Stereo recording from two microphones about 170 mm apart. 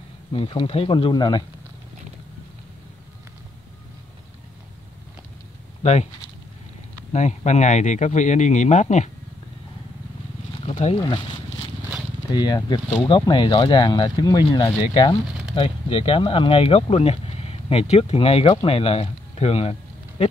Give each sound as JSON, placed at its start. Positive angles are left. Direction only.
{"t": 0.3, "sound": "speech", "side_deg": 30}
{"t": 5.8, "sound": "a sound", "side_deg": 40}
{"t": 7.1, "sound": "speech", "side_deg": 45}
{"t": 10.6, "sound": "wild animals", "side_deg": 40}
{"t": 12.3, "sound": "speech", "side_deg": 25}